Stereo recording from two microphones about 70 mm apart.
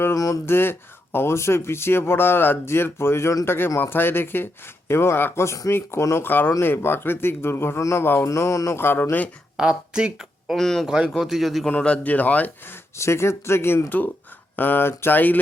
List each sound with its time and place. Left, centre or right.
0.4 s speech: left
6.2 s speech: left
7.8 s speech: left
8.0 s speech: left
8.3 s speech: left
8.8 s speech: left
9.6 s speech: centre
10.5 s a man's voice: centre
10.8 s a man's voice: centre
11.8 s speech: centre; by 13.9 s left
14.5 s speech: left